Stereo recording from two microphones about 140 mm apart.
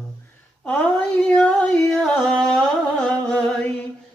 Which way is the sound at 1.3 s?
5° left (ahead or behind).